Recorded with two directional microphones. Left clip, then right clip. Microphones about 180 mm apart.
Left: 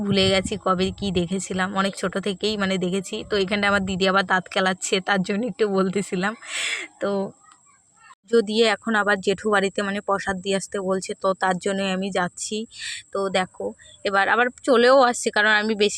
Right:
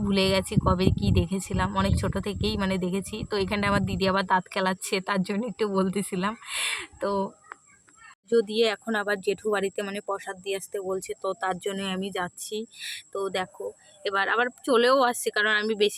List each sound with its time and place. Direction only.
0.0 s speech: 25° left (ahead or behind)
8.3 s speech: 30° left (ahead or behind)